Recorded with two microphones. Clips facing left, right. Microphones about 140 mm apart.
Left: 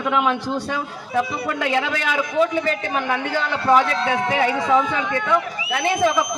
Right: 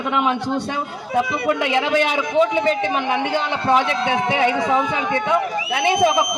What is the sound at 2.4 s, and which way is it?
A man's voice, 25° right (ahead or behind).